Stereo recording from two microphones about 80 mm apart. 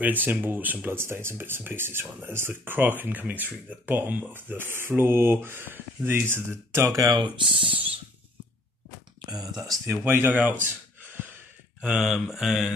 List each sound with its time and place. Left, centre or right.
0.0 s speech: right
7.2 s speech: right
9.3 s speech: right
10.0 s speech: right
11.8 s mantra: centre